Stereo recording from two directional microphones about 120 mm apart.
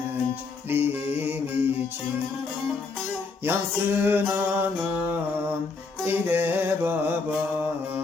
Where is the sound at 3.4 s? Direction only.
20° right (ahead or behind).